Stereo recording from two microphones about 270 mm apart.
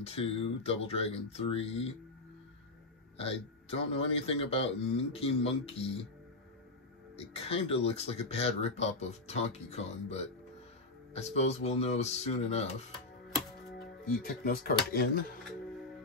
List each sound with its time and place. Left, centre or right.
0.0 s speech: left
3.2 s speech: left
7.2 s speech: left
13.7 s speech: left